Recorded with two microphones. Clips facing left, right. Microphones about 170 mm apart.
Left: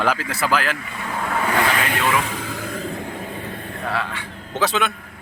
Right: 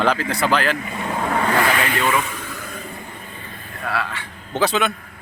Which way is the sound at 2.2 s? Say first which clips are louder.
Left 4 dB; 65° left (ahead or behind).